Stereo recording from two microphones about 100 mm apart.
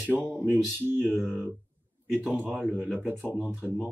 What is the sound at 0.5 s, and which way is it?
Speech, 20° right (ahead or behind).